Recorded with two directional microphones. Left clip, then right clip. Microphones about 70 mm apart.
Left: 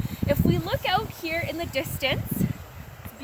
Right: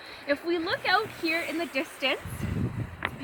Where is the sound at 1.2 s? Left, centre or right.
Left.